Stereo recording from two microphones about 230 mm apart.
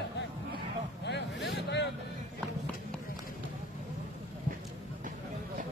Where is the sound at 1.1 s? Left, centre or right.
Left.